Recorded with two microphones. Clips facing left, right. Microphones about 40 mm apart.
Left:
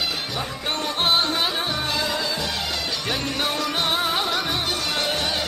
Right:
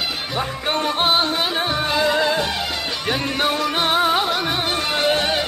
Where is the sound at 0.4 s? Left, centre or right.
Right.